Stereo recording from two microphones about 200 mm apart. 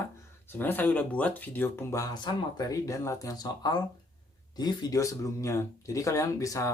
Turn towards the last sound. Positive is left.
turn(degrees=15)  # may be behind; listen again after turning